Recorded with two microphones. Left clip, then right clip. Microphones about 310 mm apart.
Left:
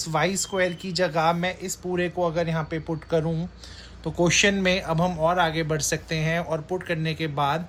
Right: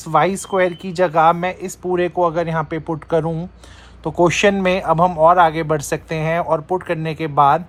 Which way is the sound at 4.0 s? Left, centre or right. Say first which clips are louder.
Right 8 dB; right.